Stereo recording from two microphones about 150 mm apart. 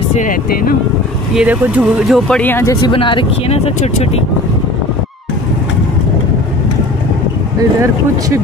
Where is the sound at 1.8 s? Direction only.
Centre (ahead or behind).